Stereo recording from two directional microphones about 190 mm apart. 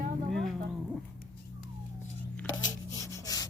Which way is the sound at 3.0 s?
20° left (ahead or behind).